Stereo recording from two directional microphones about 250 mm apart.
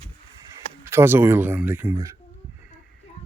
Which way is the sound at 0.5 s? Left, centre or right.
Centre.